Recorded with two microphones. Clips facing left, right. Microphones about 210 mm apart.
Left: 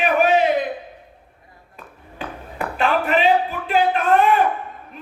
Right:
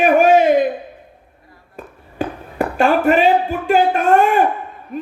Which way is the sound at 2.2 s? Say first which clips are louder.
Right 8 dB; 45° right (ahead or behind).